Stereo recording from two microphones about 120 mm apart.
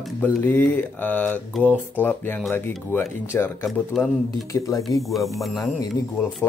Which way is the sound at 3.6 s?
Centre (ahead or behind).